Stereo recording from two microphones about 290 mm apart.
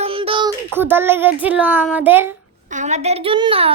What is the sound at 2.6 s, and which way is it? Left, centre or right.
A woman's voice, right.